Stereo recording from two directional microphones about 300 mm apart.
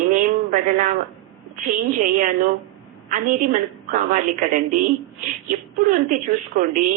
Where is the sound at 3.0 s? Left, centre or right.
Right.